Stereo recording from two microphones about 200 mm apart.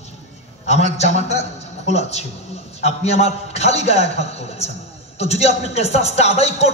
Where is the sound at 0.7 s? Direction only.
35° left (ahead or behind).